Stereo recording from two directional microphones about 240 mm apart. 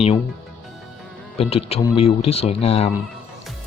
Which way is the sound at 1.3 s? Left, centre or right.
Left.